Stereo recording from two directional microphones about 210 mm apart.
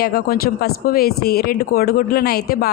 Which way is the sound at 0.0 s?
45° left (ahead or behind).